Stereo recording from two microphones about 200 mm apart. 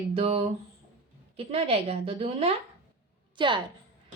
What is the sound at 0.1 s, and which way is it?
A woman's voice, 30° right (ahead or behind).